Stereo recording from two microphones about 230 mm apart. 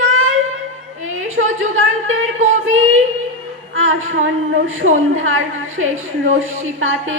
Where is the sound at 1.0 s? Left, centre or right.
Right.